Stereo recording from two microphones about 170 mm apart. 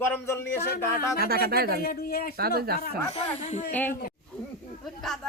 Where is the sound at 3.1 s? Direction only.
40° left (ahead or behind).